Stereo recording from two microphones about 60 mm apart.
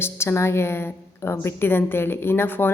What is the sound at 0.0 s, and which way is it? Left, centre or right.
A woman's voice, left.